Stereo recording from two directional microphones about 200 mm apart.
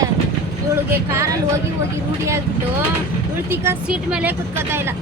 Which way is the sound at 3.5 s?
10° right (ahead or behind).